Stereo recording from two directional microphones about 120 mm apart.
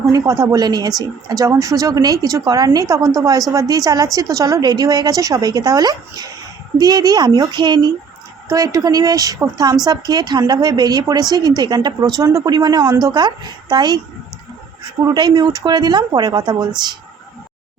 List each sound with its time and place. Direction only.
0.0 s a woman's voice: 30° right (ahead or behind)
15.0 s a woman's voice: 35° right (ahead or behind)